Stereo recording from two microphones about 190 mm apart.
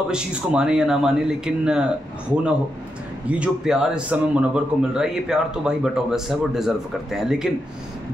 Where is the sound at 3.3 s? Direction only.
5° right (ahead or behind).